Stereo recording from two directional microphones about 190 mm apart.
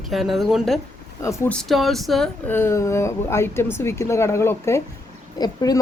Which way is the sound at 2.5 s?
15° left (ahead or behind).